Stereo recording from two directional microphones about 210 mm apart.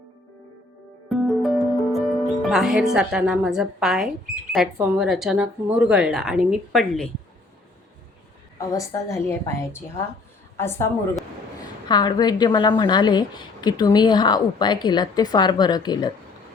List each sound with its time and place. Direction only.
1.1 s music: centre (ahead or behind)
4.5 s a woman's voice: centre (ahead or behind)
8.5 s a woman's voice: 15° left (ahead or behind)